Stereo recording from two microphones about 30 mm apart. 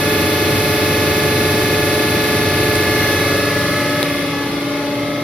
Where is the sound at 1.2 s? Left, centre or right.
Right.